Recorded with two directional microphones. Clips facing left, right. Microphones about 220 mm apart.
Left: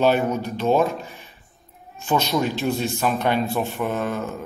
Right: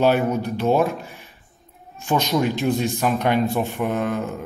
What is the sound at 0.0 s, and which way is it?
Speech, 15° right (ahead or behind).